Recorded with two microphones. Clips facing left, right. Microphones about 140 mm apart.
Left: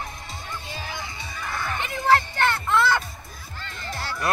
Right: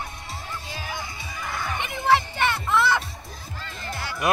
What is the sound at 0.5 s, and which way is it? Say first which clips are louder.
Music: even; 10° right (ahead or behind).